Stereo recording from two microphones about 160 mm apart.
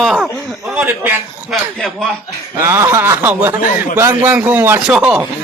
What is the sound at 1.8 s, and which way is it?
Speech, centre (ahead or behind).